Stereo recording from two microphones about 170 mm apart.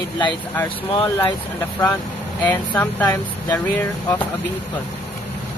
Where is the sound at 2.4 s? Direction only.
10° left (ahead or behind).